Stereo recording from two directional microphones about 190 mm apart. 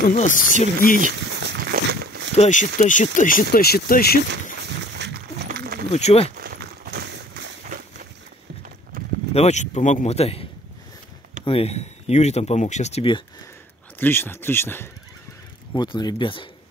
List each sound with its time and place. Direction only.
0.1 s speech: 45° left (ahead or behind)
1.4 s walk: 60° right (ahead or behind)
2.3 s speech: 40° left (ahead or behind); by 4.2 s 55° left (ahead or behind)
4.9 s a sound: 65° right (ahead or behind)
5.9 s speech: 35° left (ahead or behind)
6.3 s a sound: 50° right (ahead or behind)
8.9 s a sound: 45° right (ahead or behind)
9.3 s speech: 35° left (ahead or behind)
11.4 s speech: 30° left (ahead or behind)
13.9 s speech: 10° left (ahead or behind)
15.7 s speech: 25° left (ahead or behind)